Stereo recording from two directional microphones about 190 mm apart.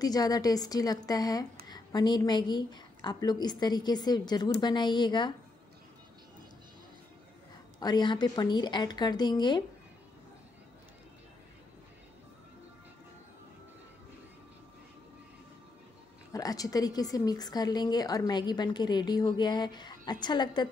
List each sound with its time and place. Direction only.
0.0 s a woman's voice: 20° left (ahead or behind)
7.8 s a woman's voice: 25° left (ahead or behind)
16.3 s a woman's voice: 20° left (ahead or behind)